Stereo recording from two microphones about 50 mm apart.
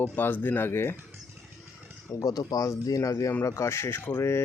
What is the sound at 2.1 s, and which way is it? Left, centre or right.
Speech, left.